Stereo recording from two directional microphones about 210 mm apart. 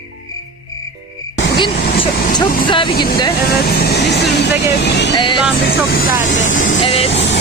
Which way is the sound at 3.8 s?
50° left (ahead or behind).